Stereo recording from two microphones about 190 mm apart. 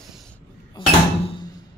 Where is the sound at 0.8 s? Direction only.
25° left (ahead or behind).